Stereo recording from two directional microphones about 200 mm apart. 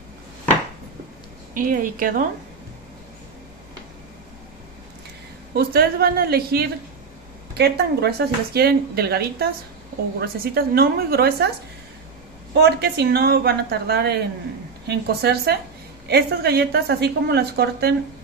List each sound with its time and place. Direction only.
1.5 s a woman's voice: 45° right (ahead or behind)
5.5 s a woman's voice: 50° right (ahead or behind)
12.5 s a woman's voice: 55° right (ahead or behind)